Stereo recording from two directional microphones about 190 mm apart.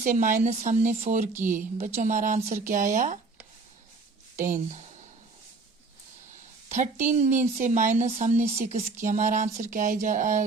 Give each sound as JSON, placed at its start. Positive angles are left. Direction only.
{"t": 0.0, "sound": "speech", "side_deg": -40}
{"t": 1.3, "sound": "speech", "side_deg": -10}
{"t": 2.0, "sound": "speech", "side_deg": -40}
{"t": 4.4, "sound": "speech", "side_deg": -45}
{"t": 6.7, "sound": "speech", "side_deg": -40}